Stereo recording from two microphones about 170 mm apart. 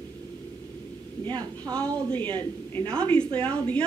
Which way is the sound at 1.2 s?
25° right (ahead or behind).